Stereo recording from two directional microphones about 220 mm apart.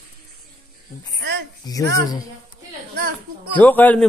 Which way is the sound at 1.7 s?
15° left (ahead or behind).